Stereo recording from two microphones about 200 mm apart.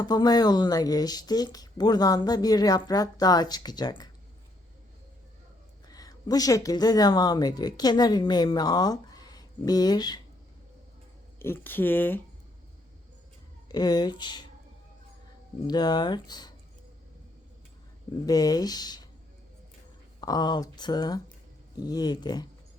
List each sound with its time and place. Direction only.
0.0 s speech: 20° left (ahead or behind)
5.9 s a woman's voice: 20° left (ahead or behind)
11.3 s speech: 10° left (ahead or behind)
13.7 s speech: 20° left (ahead or behind)
15.6 s speech: 20° left (ahead or behind)
18.3 s speech: 20° left (ahead or behind)
20.2 s speech: 20° left (ahead or behind)